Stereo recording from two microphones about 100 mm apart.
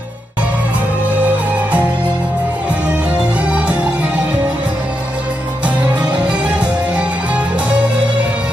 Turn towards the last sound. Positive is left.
turn(degrees=-15)  # may be behind; listen again after turning